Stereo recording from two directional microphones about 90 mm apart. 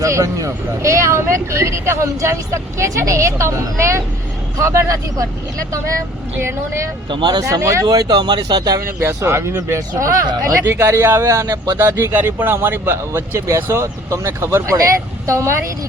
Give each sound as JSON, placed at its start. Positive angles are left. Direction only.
{"t": 0.0, "sound": "speech", "side_deg": -35}
{"t": 7.1, "sound": "speech", "side_deg": -55}
{"t": 7.4, "sound": "speech", "side_deg": -35}
{"t": 9.0, "sound": "speech", "side_deg": -30}